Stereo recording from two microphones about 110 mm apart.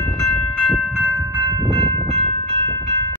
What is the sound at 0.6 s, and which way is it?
Train, centre (ahead or behind).